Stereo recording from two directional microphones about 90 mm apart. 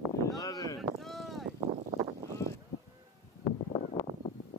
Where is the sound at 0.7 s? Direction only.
Centre (ahead or behind).